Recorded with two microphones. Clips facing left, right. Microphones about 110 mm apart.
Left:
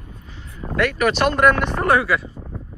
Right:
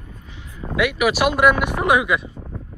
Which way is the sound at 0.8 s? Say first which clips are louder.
Even; 10° right (ahead or behind).